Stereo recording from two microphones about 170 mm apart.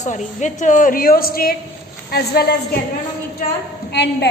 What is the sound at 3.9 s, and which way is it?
Speech, 80° left.